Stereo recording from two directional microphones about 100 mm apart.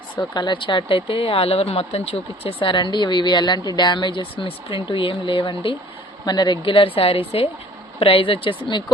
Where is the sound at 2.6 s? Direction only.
50° left (ahead or behind).